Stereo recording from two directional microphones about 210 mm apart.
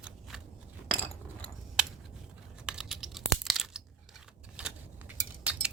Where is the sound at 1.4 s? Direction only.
5° right (ahead or behind).